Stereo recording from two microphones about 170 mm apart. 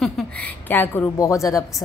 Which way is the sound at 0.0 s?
10° left (ahead or behind).